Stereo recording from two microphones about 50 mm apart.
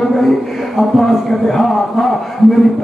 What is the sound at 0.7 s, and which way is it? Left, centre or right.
Speech, centre.